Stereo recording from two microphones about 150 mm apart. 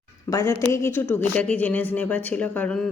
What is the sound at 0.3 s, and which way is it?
A woman's voice, 20° left (ahead or behind).